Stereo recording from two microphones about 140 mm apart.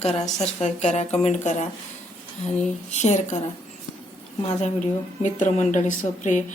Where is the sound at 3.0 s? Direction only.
55° left (ahead or behind).